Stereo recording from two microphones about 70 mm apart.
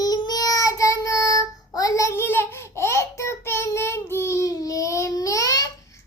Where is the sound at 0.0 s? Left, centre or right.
Left.